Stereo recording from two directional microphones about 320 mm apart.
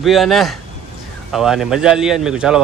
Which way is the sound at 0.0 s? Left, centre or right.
Centre.